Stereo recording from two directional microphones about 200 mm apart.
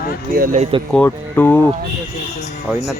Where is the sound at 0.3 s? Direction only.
40° right (ahead or behind).